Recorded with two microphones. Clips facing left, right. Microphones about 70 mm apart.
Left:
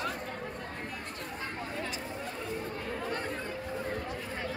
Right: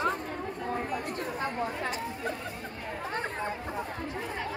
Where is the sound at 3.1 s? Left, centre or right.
Right.